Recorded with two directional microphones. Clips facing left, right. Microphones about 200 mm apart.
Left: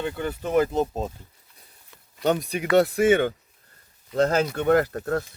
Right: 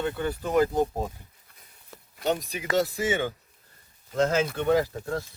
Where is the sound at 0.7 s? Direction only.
25° left (ahead or behind).